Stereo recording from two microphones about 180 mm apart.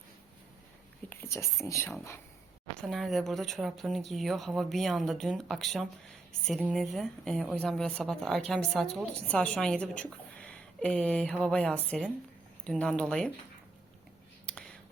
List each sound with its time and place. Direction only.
1.1 s speech: 15° left (ahead or behind)
2.8 s a woman's voice: centre (ahead or behind)
14.4 s whispering: 5° left (ahead or behind)